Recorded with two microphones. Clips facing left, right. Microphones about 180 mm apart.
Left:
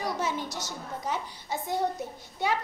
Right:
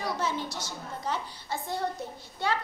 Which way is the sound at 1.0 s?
15° left (ahead or behind).